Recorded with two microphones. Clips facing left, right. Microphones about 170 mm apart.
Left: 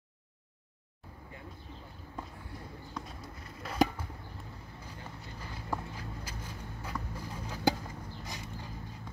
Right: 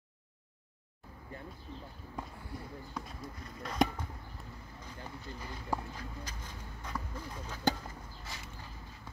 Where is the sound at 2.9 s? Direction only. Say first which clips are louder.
Left 1 dB; centre (ahead or behind).